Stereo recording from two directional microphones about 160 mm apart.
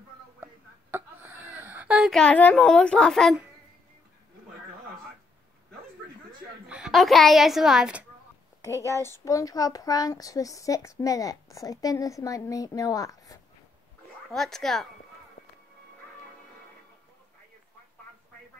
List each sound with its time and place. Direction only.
0.9 s a sound: 10° right (ahead or behind)
6.7 s a woman's voice: centre (ahead or behind)
8.8 s speech: 15° left (ahead or behind)
14.3 s speech: centre (ahead or behind)
15.4 s music: 75° left (ahead or behind)